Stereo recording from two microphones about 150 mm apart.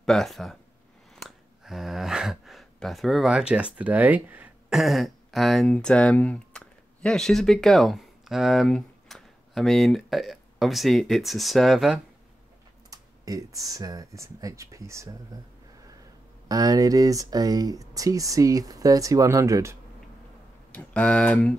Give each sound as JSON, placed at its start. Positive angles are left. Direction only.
{"t": 0.0, "sound": "speech", "side_deg": 0}
{"t": 12.9, "sound": "speech", "side_deg": -25}
{"t": 16.4, "sound": "speech", "side_deg": -25}
{"t": 20.7, "sound": "speech", "side_deg": 10}